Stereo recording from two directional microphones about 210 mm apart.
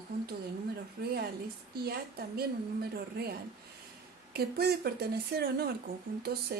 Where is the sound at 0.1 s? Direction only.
45° right (ahead or behind).